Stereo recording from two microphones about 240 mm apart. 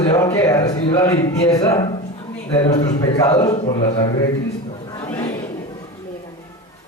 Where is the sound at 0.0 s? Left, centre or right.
Centre.